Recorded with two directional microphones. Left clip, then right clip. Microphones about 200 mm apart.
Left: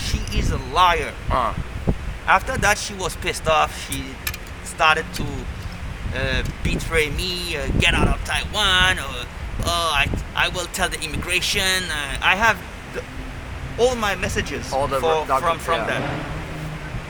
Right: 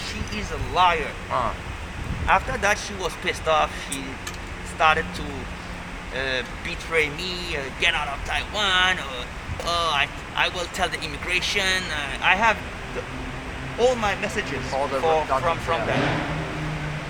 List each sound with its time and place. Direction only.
0.0 s a sound: 65° left (ahead or behind)
1.3 s speech: 30° left (ahead or behind)
2.2 s speech: 60° left (ahead or behind)
4.8 s speech: 60° left (ahead or behind)
6.1 s speech: 55° left (ahead or behind)
13.7 s speech: 65° left (ahead or behind)